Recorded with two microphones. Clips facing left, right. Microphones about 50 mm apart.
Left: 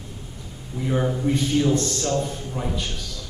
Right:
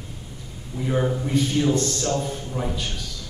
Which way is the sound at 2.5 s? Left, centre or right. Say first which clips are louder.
Right 1 dB; centre.